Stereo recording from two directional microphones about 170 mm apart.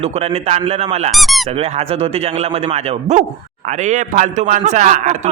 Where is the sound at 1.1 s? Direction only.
Centre (ahead or behind).